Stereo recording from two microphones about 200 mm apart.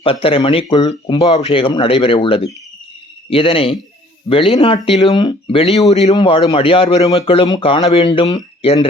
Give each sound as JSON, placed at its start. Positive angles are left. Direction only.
{"t": 0.0, "sound": "speech", "side_deg": 25}